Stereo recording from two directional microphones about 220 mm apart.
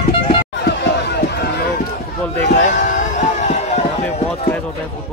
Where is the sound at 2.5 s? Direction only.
35° left (ahead or behind).